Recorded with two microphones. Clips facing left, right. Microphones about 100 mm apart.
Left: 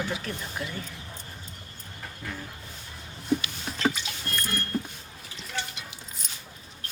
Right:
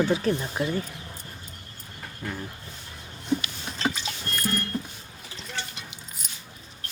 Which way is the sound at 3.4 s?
30° right (ahead or behind).